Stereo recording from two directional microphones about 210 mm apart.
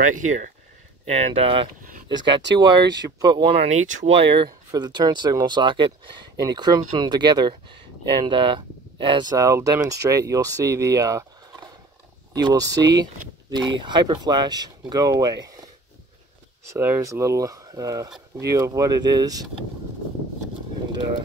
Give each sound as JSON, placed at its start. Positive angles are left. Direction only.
{"t": 0.0, "sound": "speech", "side_deg": -35}
{"t": 12.4, "sound": "speech", "side_deg": -20}
{"t": 16.7, "sound": "speech", "side_deg": -10}